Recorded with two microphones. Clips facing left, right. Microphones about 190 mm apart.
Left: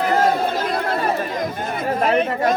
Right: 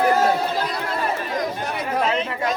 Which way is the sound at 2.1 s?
55° left (ahead or behind).